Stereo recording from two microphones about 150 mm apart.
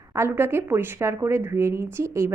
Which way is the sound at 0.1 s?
15° right (ahead or behind).